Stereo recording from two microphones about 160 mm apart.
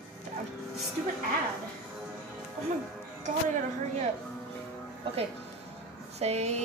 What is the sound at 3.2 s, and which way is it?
Speech, 50° right (ahead or behind).